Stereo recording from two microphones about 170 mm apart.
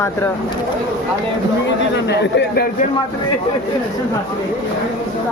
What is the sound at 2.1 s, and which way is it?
Speech, 80° left.